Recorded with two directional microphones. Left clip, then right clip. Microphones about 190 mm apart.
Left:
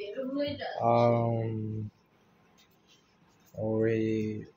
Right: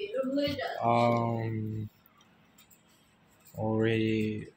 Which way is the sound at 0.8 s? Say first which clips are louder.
Left 2 dB; 15° left (ahead or behind).